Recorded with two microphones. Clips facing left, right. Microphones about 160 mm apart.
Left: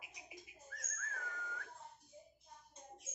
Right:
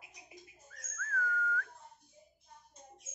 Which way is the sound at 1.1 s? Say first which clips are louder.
Right 13 dB; 20° left (ahead or behind).